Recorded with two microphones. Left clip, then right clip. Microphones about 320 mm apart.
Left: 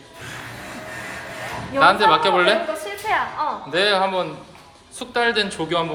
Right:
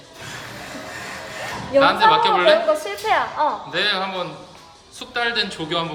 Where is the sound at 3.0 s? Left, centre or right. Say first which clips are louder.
Right 3 dB; right.